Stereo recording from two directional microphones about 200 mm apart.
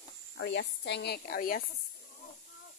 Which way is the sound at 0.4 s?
60° left (ahead or behind).